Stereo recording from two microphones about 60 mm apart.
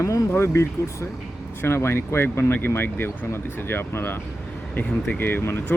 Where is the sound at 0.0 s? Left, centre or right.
Left.